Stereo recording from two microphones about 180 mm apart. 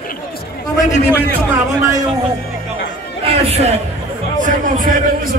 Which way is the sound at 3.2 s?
35° right (ahead or behind).